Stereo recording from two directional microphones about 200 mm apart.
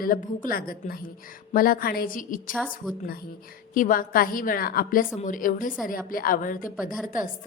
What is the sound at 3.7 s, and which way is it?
A woman's voice, 45° left (ahead or behind).